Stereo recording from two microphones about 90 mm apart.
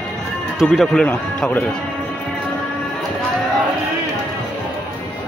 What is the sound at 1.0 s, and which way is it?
Speech, 20° left (ahead or behind).